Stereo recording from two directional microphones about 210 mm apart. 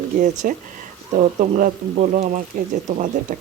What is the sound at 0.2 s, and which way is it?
Speech, 40° right (ahead or behind).